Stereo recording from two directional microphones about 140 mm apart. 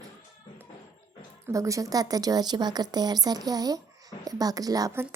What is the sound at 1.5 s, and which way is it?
A woman's voice, 25° right (ahead or behind).